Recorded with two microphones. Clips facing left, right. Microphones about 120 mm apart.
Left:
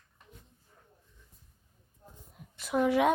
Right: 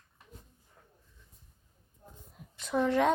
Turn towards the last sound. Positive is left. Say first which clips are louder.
# left 1 dB
turn(degrees=10)  # may be behind; listen again after turning